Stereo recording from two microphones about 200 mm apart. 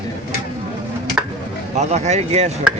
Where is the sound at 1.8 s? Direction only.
35° right (ahead or behind).